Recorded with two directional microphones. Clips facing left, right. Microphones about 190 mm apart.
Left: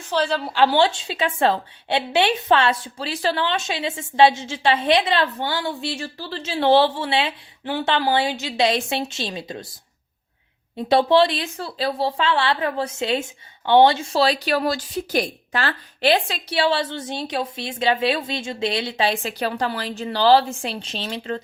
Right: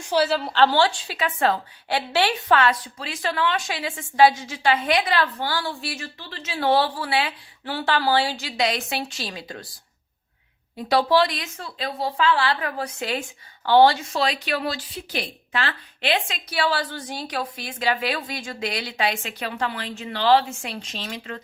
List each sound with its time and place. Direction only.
0.1 s a woman's voice: 5° right (ahead or behind)
0.5 s a woman's voice: 15° left (ahead or behind)
10.8 s a woman's voice: 25° left (ahead or behind)